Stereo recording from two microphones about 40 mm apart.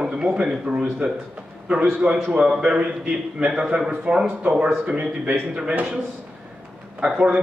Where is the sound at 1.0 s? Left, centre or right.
Right.